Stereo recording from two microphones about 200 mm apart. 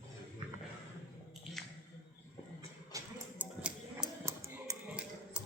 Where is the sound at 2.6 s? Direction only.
15° right (ahead or behind).